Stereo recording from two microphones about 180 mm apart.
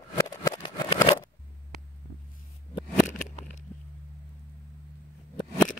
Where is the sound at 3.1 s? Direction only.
40° left (ahead or behind).